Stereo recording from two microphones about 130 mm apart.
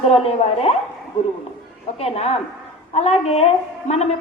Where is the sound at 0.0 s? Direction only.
50° left (ahead or behind).